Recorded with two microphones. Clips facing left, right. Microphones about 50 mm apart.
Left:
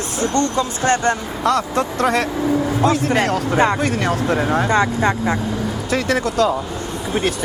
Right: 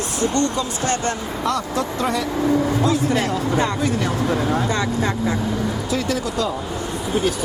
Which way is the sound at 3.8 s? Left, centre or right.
Left.